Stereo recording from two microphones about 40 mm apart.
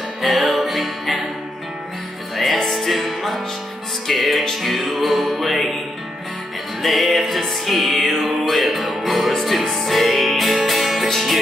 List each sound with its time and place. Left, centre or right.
0.2 s music: centre
2.3 s music: centre
6.8 s music: centre